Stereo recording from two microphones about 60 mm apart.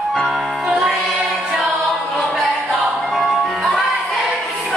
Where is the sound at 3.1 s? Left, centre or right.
Centre.